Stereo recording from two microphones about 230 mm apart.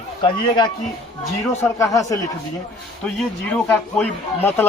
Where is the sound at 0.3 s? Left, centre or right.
Centre.